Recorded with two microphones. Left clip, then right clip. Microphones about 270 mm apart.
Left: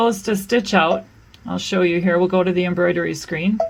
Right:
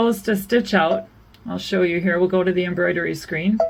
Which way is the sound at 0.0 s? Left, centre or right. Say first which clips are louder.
Left 1 dB; left.